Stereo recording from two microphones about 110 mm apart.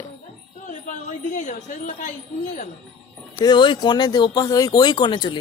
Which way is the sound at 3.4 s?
45° left (ahead or behind).